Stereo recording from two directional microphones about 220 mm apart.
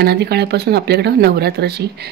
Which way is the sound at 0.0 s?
45° right (ahead or behind).